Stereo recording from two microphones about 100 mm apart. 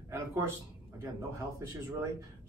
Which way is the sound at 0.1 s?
30° right (ahead or behind).